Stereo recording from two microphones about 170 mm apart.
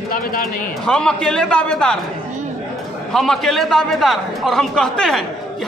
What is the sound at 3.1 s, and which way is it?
A man's voice, centre (ahead or behind).